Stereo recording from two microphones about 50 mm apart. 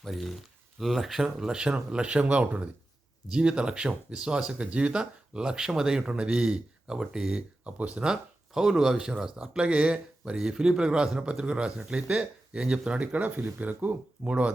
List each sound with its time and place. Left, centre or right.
0.0 s speech: centre
7.8 s speech: right
8.0 s speech: centre
9.3 s speech: right
13.0 s speech: right